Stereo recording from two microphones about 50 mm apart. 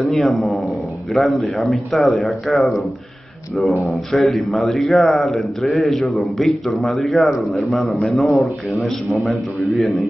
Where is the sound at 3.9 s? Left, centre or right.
Centre.